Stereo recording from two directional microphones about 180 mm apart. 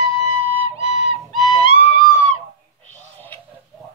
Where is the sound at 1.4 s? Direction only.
30° left (ahead or behind).